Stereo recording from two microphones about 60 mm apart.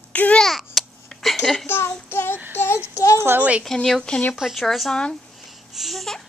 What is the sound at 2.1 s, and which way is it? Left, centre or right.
Child singing, left.